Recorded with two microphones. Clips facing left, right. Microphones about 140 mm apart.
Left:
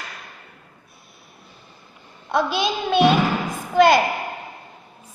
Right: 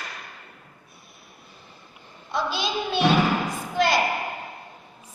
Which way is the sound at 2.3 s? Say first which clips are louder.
Left 5 dB; 60° left (ahead or behind).